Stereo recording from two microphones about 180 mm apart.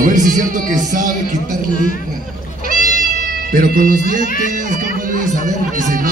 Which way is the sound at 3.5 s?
55° right (ahead or behind).